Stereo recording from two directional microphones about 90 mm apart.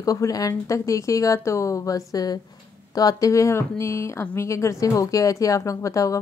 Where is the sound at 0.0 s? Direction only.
40° left (ahead or behind).